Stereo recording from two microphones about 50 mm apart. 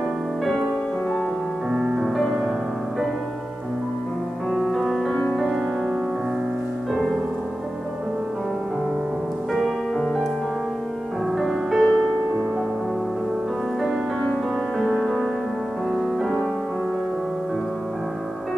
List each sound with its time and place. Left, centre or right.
1.7 s music: centre
4.5 s music: centre
11.3 s music: centre
14.8 s music: centre
15.9 s music: centre